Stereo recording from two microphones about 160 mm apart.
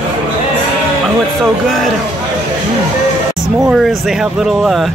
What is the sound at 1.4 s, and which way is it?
Speech, 5° left (ahead or behind).